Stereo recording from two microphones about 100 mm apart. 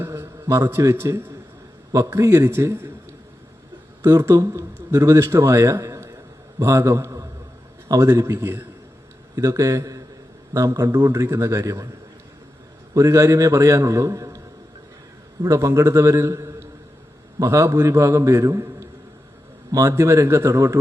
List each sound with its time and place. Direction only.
0.0 s a man's voice: 30° right (ahead or behind)
4.0 s a man's voice: 25° right (ahead or behind)
12.9 s a man's voice: 30° right (ahead or behind)